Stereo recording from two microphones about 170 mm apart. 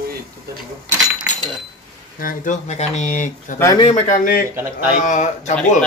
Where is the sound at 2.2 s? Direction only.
45° left (ahead or behind).